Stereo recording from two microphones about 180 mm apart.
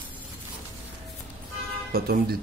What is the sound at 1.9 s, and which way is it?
Speech, 55° right (ahead or behind).